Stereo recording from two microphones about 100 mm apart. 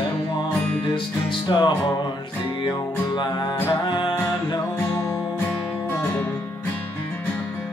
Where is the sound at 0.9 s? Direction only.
55° left (ahead or behind).